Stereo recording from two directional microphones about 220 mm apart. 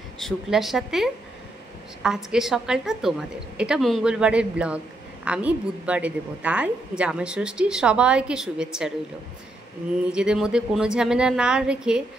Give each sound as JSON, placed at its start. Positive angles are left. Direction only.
{"t": 0.2, "sound": "a woman's voice", "side_deg": 0}
{"t": 10.1, "sound": "a woman's voice", "side_deg": -5}